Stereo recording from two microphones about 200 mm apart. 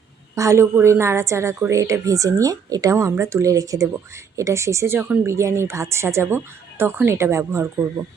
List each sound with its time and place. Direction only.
0.3 s a woman's voice: 15° right (ahead or behind)